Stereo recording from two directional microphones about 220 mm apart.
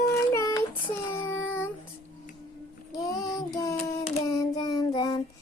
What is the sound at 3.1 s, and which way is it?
Child singing, 15° left (ahead or behind).